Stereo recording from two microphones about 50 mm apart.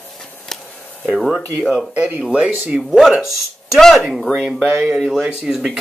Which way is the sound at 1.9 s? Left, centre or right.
Right.